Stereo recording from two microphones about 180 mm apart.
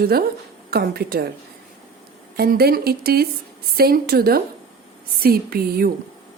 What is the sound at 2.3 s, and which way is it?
A woman's voice, 60° right (ahead or behind).